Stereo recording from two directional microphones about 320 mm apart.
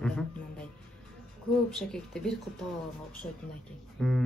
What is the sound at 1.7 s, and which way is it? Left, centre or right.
Speech, centre.